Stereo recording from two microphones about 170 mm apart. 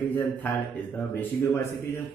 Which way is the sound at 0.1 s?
10° left (ahead or behind).